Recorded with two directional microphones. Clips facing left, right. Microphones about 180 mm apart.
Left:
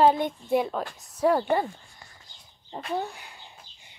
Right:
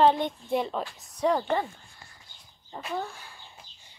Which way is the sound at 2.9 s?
20° left (ahead or behind).